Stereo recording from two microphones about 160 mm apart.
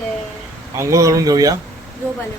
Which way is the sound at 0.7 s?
20° right (ahead or behind).